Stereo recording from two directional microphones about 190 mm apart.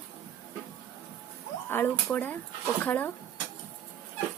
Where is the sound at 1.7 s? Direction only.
10° left (ahead or behind).